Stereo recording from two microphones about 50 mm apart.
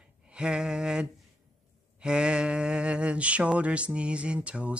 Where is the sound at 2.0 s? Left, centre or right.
Centre.